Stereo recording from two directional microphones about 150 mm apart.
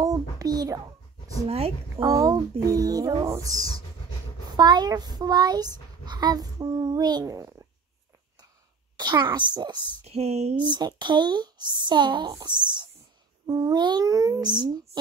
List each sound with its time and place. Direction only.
0.0 s a child's voice: 25° right (ahead or behind)
1.5 s a woman's voice: 40° right (ahead or behind)
2.0 s a child's voice: 25° right (ahead or behind)
8.9 s a child's voice: 30° right (ahead or behind)
10.0 s speech: 45° right (ahead or behind)
10.6 s a child's voice: 30° right (ahead or behind)